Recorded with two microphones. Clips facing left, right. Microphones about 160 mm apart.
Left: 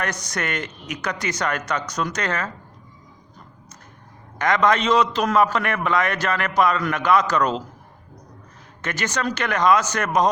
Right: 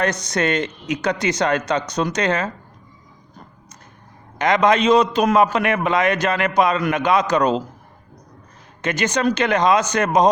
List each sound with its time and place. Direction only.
0.0 s a man's voice: 20° right (ahead or behind)
4.4 s a man's voice: 20° right (ahead or behind)
8.8 s a man's voice: 20° right (ahead or behind)